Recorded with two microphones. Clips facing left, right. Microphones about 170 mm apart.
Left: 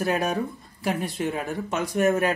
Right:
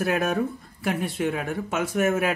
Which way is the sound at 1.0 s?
55° right (ahead or behind).